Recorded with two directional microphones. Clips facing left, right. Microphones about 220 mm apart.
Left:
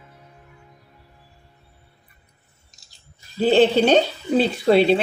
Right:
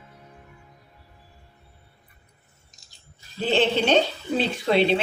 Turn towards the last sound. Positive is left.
turn(degrees=40)  # may be behind; listen again after turning